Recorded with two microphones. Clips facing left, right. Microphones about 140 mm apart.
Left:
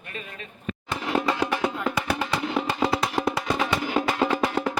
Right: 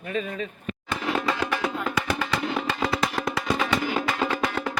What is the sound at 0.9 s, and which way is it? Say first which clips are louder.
Music: left 1 dB; 10° left (ahead or behind).